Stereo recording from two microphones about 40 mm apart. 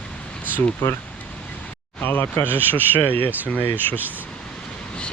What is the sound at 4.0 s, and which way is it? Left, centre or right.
Speech, right.